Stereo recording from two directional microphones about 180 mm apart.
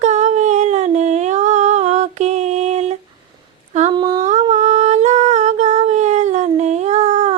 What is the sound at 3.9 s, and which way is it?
Humming, 25° right (ahead or behind).